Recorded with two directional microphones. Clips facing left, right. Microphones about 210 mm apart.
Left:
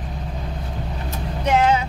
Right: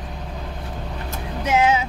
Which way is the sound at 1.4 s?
5° right (ahead or behind).